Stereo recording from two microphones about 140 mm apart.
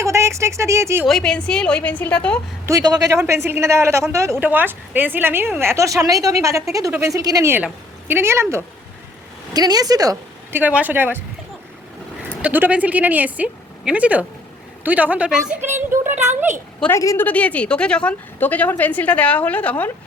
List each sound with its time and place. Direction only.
0.0 s speech: 20° right (ahead or behind)
1.0 s a woman's voice: 5° left (ahead or behind)
2.6 s a man's voice: 25° right (ahead or behind)
10.6 s a woman's voice: 10° right (ahead or behind)
12.4 s a woman's voice: 10° right (ahead or behind)
17.0 s a woman's voice: 25° left (ahead or behind)
17.2 s a woman's voice: 10° left (ahead or behind)